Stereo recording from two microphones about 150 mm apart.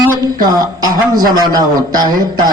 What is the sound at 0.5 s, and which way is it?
A man's voice, 25° right (ahead or behind).